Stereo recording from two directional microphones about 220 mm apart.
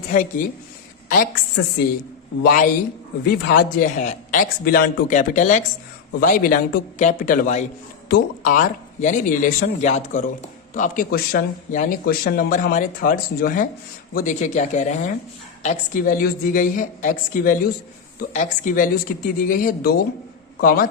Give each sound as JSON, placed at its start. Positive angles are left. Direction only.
{"t": 0.1, "sound": "speech", "side_deg": 35}
{"t": 2.4, "sound": "a man's voice", "side_deg": 40}